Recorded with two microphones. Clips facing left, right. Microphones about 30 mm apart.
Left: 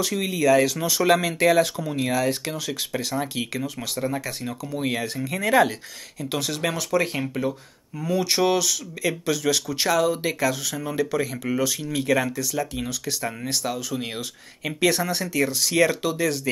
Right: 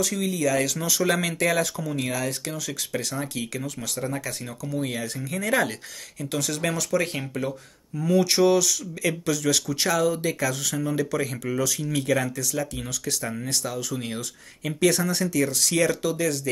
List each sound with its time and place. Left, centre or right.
0.0 s speech: left
2.0 s speech: centre
2.2 s speech: left